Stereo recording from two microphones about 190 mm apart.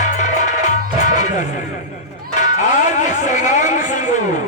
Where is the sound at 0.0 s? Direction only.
40° left (ahead or behind).